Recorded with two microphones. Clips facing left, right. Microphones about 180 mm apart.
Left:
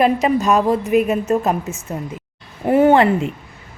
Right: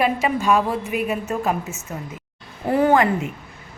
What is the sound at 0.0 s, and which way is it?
A woman's voice, 40° left (ahead or behind).